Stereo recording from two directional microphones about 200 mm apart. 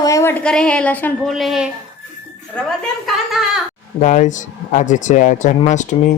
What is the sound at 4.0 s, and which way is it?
Speech, 40° left (ahead or behind).